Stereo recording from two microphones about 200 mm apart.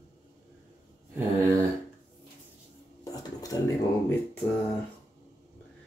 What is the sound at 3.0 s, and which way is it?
Dishes, 20° left (ahead or behind).